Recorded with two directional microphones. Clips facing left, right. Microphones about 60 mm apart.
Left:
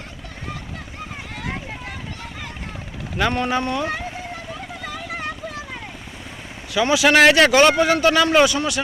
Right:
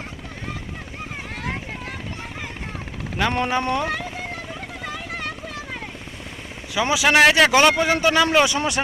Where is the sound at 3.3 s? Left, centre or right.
Right.